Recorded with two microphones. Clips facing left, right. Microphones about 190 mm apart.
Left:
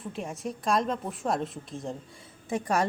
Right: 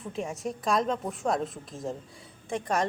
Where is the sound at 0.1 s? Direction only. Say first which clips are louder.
Right 2 dB; centre (ahead or behind).